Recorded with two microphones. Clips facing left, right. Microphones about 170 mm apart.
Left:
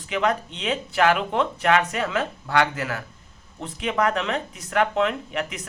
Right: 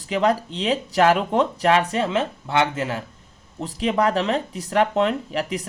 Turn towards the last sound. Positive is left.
turn(degrees=-35)  # may be behind; listen again after turning